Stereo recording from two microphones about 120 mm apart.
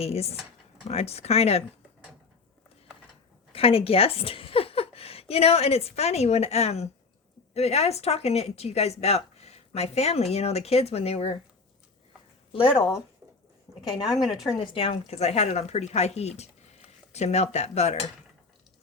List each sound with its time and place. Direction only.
0.0 s speech: 60° left (ahead or behind)
3.5 s a woman's voice: 50° left (ahead or behind)
12.5 s speech: 45° left (ahead or behind)
14.1 s speech: centre (ahead or behind)
14.6 s speech: 50° left (ahead or behind); by 18.0 s 65° left (ahead or behind)